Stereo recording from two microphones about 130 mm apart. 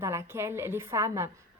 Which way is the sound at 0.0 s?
20° right (ahead or behind).